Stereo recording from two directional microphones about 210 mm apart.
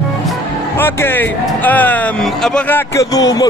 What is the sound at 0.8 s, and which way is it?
Music, 10° left (ahead or behind).